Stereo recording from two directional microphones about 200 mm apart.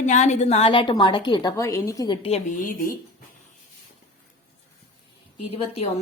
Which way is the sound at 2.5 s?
40° left (ahead or behind).